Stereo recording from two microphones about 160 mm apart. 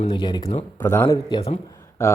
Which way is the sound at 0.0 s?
30° left (ahead or behind).